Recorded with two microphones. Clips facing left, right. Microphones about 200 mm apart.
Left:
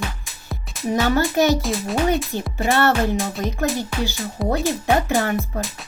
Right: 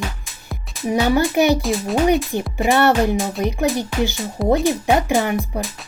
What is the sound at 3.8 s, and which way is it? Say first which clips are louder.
Speech: right 4 dB; 15° right (ahead or behind).